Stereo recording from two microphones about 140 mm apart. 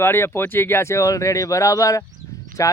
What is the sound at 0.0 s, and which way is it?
Speech, 15° left (ahead or behind).